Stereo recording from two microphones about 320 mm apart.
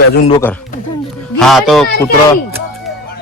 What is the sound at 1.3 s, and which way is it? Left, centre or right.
Speech, centre.